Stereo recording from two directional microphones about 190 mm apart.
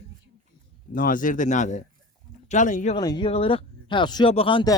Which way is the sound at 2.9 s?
25° left (ahead or behind).